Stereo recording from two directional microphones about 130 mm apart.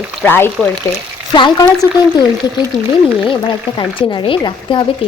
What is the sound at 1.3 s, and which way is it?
Speech, 35° left (ahead or behind).